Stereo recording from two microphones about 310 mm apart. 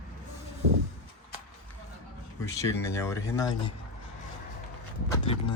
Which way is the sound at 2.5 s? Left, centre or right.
Centre.